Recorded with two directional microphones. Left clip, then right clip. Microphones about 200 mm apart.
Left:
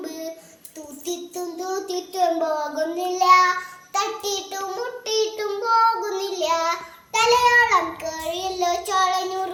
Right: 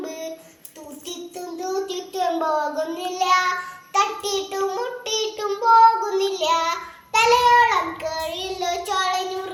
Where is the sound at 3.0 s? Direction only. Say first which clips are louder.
Left 5 dB; 10° left (ahead or behind).